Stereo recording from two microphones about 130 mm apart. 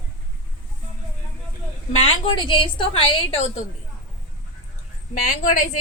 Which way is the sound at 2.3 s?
40° left (ahead or behind).